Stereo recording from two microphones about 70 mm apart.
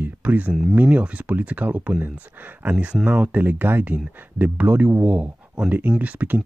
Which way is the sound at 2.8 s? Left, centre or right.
Centre.